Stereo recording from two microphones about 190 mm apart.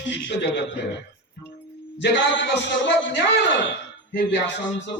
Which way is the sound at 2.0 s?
70° left (ahead or behind).